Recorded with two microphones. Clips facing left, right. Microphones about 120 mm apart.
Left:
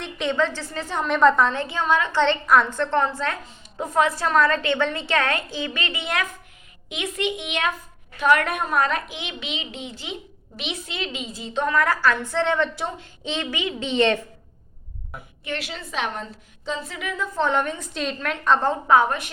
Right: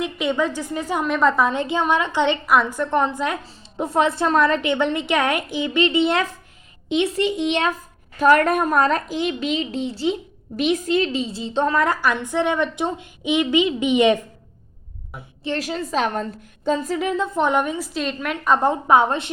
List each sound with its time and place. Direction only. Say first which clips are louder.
0.0 s a woman's voice: right 2 dB; 5° right (ahead or behind)
1.5 s a woman's voice: right 2 dB; 20° right (ahead or behind)
3.4 s a woman's voice: right 4 dB; 35° right (ahead or behind); by 14.2 s 15° right (ahead or behind)
15.4 s a child's voice: right 7 dB; 40° right (ahead or behind)
17.3 s a woman's voice: even; 15° right (ahead or behind)